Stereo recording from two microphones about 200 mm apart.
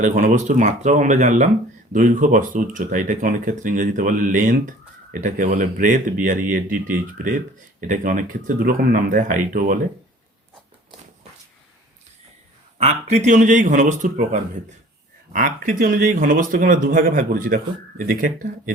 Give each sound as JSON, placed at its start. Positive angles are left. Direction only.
{"t": 0.0, "sound": "speech", "side_deg": -40}
{"t": 12.8, "sound": "speech", "side_deg": -35}
{"t": 15.3, "sound": "speech", "side_deg": -40}